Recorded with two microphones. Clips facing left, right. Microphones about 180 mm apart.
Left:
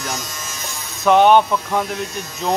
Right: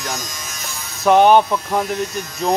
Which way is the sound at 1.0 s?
Centre (ahead or behind).